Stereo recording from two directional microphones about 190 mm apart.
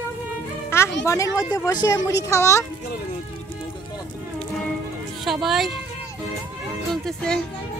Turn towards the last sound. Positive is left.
turn(degrees=5)  # may be behind; listen again after turning